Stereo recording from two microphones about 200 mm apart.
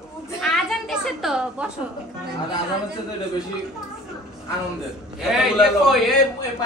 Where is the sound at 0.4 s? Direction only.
Centre (ahead or behind).